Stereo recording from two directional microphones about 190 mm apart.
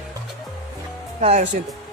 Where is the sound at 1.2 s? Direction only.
35° right (ahead or behind).